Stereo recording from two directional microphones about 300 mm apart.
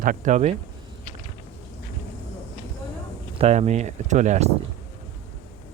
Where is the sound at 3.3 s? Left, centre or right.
Right.